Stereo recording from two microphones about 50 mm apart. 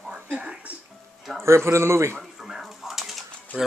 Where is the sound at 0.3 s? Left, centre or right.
Right.